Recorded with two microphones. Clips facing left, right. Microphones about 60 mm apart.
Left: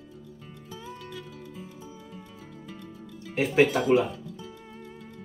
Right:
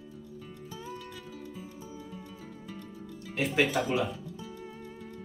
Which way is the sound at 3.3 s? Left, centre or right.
Left.